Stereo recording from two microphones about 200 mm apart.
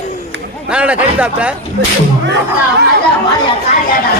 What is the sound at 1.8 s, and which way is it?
Speech, 55° right (ahead or behind).